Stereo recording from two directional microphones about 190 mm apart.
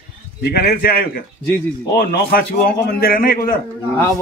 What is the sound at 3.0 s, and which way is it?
Speech, 50° left (ahead or behind).